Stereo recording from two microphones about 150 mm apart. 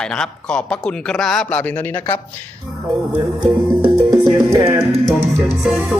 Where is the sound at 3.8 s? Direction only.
25° right (ahead or behind).